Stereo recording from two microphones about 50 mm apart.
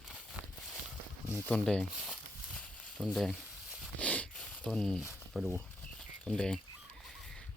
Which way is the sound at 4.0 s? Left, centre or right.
Left.